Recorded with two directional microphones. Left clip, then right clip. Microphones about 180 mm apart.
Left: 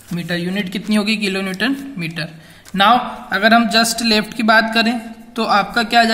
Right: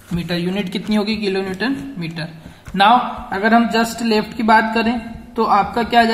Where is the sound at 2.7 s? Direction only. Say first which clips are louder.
Even; 40° left (ahead or behind).